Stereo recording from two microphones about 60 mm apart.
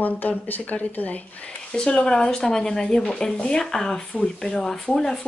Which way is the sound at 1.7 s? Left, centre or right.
Centre.